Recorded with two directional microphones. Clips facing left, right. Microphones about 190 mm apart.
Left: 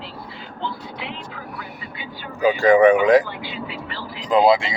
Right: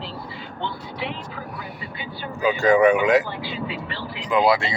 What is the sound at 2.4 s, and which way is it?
Speech, 30° left (ahead or behind).